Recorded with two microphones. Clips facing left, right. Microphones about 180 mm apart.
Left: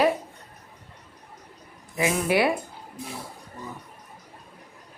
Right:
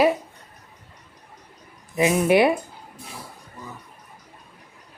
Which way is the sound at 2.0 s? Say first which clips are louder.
Right 5 dB; 20° right (ahead or behind).